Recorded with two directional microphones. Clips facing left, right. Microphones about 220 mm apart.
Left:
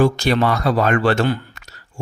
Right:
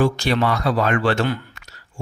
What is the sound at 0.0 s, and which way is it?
Speech, 40° left (ahead or behind).